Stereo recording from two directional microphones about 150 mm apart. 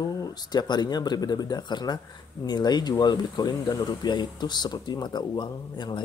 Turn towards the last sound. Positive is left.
turn(degrees=30)  # may be behind; listen again after turning